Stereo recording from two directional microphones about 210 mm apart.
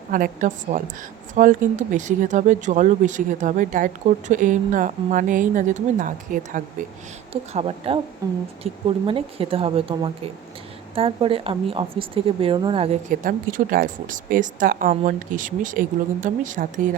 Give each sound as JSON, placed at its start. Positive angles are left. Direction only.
{"t": 0.1, "sound": "a woman's voice", "side_deg": -40}
{"t": 7.5, "sound": "speech", "side_deg": -25}
{"t": 8.2, "sound": "a woman's voice", "side_deg": -15}